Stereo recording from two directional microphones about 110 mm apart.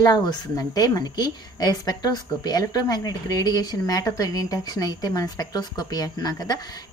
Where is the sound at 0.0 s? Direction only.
40° left (ahead or behind).